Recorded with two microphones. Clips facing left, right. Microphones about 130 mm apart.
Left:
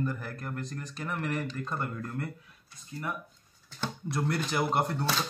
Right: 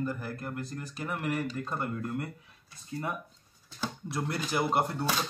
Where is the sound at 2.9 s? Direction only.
25° right (ahead or behind).